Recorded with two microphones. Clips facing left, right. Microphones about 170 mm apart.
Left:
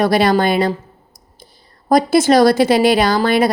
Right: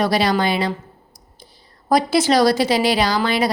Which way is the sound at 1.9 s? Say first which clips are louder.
Left 4 dB; 50° left (ahead or behind).